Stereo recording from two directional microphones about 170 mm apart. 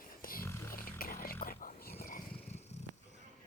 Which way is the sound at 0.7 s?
55° left (ahead or behind).